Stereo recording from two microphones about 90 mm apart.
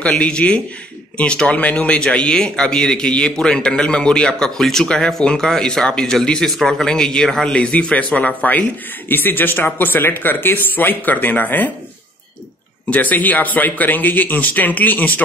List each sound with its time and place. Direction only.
0.0 s speech: 10° left (ahead or behind)
12.9 s speech: 20° left (ahead or behind)